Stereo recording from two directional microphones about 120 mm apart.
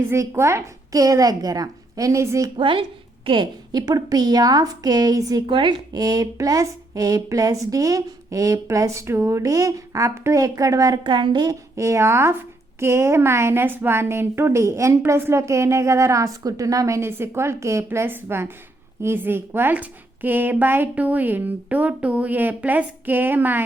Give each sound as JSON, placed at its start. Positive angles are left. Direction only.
{"t": 0.0, "sound": "a woman's voice", "side_deg": -20}
{"t": 2.6, "sound": "a woman's voice", "side_deg": -45}
{"t": 5.5, "sound": "a woman's voice", "side_deg": -45}
{"t": 11.0, "sound": "a woman's voice", "side_deg": -40}